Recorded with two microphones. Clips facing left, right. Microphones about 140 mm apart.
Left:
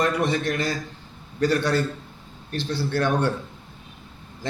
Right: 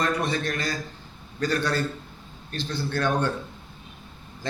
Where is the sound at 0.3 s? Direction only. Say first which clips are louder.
Left 3 dB; 25° left (ahead or behind).